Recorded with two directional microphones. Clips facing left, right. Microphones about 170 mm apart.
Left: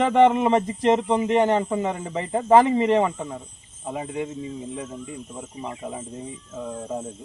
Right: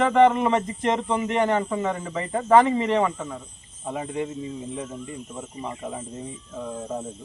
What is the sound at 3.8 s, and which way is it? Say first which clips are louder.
Speech: even; 5° left (ahead or behind).